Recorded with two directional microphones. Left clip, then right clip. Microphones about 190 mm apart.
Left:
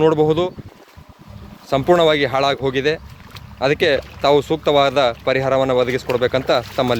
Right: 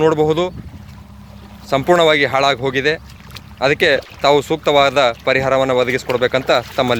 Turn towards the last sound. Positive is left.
turn(degrees=0)  # may be behind; listen again after turning